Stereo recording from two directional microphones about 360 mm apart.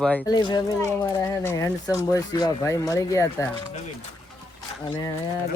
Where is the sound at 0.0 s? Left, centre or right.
Centre.